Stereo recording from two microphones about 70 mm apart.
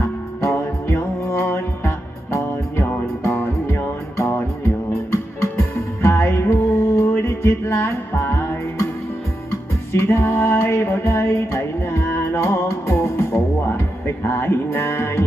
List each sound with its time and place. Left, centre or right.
0.4 s music: left